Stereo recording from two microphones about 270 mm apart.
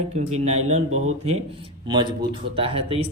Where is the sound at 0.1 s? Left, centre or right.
Right.